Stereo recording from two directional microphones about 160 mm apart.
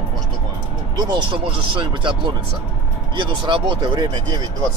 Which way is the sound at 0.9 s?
25° right (ahead or behind).